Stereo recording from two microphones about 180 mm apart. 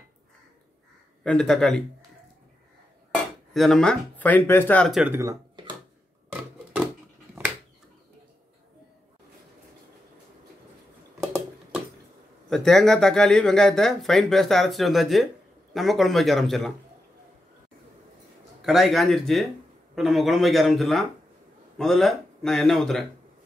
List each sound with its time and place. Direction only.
1.2 s speech: 5° left (ahead or behind)
3.5 s speech: centre (ahead or behind)
5.1 s a sound: 20° right (ahead or behind)
12.4 s speech: centre (ahead or behind)
18.6 s speech: centre (ahead or behind)